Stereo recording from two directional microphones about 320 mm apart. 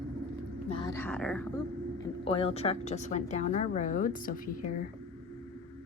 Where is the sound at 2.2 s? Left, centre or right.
Centre.